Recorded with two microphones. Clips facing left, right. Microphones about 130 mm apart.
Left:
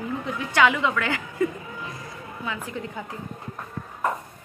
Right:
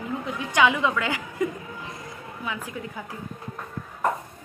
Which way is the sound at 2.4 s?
15° right (ahead or behind).